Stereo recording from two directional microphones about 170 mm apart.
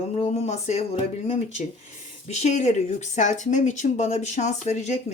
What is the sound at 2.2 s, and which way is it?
Speech, 40° left (ahead or behind).